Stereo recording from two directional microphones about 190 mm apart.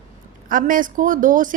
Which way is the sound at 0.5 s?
45° right (ahead or behind).